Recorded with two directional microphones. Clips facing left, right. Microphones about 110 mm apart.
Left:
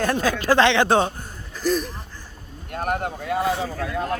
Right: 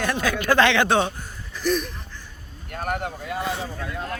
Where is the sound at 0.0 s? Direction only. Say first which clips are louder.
Left 2 dB; 40° left (ahead or behind).